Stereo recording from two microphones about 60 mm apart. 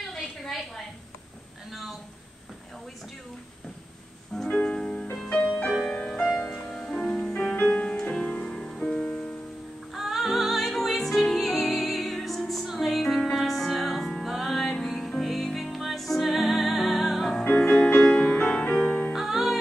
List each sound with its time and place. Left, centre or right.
0.5 s a sound: centre
4.5 s music: centre
7.5 s music: left
9.9 s music: centre
17.5 s music: centre
19.1 s music: centre